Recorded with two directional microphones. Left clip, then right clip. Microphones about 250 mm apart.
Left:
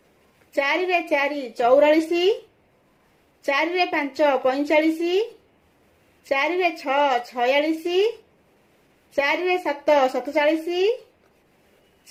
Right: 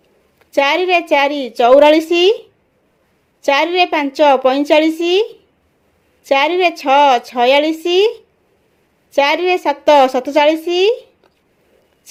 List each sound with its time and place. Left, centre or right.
0.5 s a woman's voice: right
3.4 s a woman's voice: right
6.2 s a woman's voice: right
9.1 s a woman's voice: right